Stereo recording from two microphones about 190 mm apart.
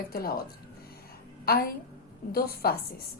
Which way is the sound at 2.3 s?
55° left (ahead or behind).